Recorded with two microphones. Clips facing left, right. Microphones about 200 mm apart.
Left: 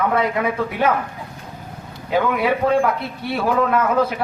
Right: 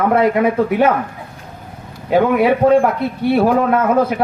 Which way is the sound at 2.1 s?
45° right (ahead or behind).